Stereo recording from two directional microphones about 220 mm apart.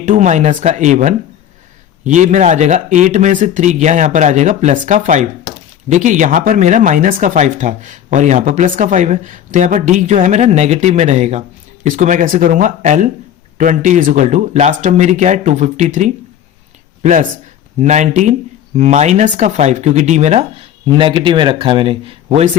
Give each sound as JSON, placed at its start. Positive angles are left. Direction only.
{"t": 0.0, "sound": "a man's voice", "side_deg": -35}